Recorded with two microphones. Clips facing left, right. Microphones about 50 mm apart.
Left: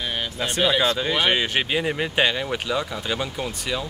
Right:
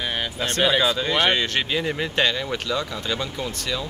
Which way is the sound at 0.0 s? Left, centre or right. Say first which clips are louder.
Right 1 dB; centre.